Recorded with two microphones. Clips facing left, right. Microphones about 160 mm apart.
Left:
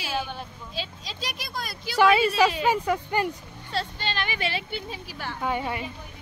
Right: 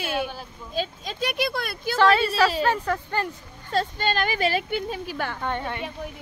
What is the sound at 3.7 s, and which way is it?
Speech, 45° right (ahead or behind).